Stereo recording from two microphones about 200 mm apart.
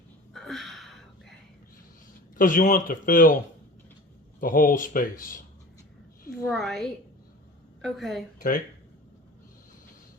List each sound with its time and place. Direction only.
0.3 s a sound: centre (ahead or behind)
2.3 s speech: 40° left (ahead or behind)
4.4 s speech: 45° left (ahead or behind)
6.5 s a woman's voice: centre (ahead or behind)
8.4 s speech: 45° left (ahead or behind)